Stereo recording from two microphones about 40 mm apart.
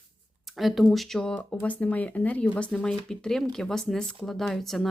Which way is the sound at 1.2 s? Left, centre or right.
Left.